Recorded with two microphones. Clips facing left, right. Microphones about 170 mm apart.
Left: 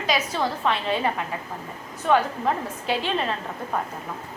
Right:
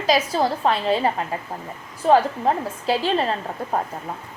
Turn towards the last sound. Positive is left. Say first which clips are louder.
# right 4 dB
turn(degrees=-35)  # may be behind; listen again after turning